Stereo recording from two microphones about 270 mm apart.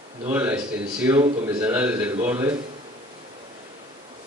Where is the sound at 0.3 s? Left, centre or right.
Centre.